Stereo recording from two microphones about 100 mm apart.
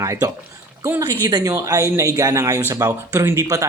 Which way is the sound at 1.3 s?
40° right (ahead or behind).